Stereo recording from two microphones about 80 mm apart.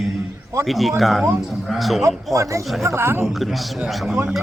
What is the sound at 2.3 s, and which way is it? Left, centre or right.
Speech, right.